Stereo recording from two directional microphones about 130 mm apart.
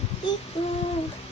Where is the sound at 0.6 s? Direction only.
50° left (ahead or behind).